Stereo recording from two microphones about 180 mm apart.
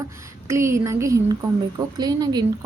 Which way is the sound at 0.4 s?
15° right (ahead or behind).